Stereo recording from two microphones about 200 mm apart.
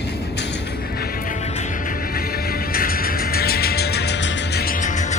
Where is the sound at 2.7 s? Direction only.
45° left (ahead or behind).